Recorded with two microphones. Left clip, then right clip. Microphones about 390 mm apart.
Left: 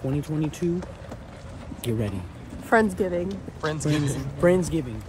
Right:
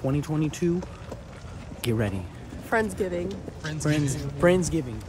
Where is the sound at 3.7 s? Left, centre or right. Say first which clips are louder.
Even; centre.